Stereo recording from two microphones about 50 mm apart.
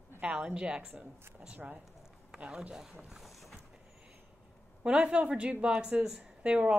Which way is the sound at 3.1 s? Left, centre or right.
Centre.